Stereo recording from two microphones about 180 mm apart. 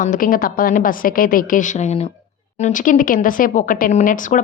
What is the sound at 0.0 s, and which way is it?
Speech, 50° left (ahead or behind).